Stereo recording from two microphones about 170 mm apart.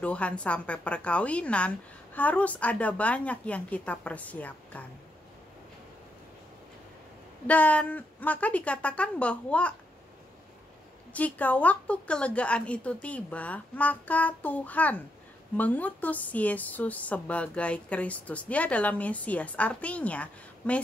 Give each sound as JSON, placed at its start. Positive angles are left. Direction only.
{"t": 0.0, "sound": "a woman's voice", "side_deg": 5}
{"t": 7.4, "sound": "a woman's voice", "side_deg": 10}
{"t": 11.1, "sound": "a woman's voice", "side_deg": 10}